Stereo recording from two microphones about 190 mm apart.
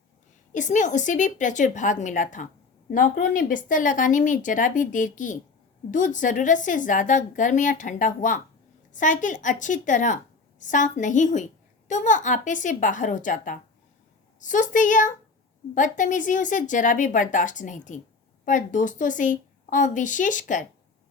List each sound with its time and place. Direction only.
0.5 s a woman's voice: 40° left (ahead or behind)